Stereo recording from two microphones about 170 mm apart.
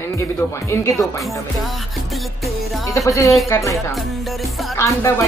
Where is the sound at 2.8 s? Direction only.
20° left (ahead or behind).